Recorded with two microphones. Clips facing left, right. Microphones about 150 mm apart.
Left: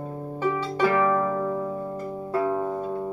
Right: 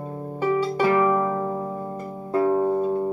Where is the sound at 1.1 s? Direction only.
20° right (ahead or behind).